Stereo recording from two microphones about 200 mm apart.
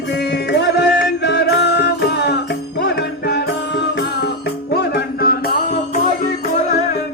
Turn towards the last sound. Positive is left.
turn(degrees=40)  # may be behind; listen again after turning